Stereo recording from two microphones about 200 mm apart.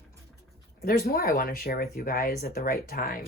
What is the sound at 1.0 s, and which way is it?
Speech, 45° left (ahead or behind).